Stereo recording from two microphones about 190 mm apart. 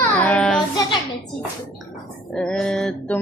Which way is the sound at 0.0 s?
5° left (ahead or behind).